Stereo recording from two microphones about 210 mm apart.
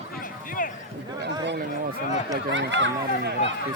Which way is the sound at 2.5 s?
60° right (ahead or behind).